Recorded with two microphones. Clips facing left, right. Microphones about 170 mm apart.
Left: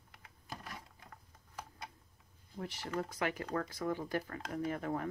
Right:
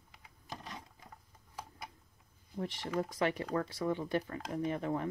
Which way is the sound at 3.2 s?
30° right (ahead or behind).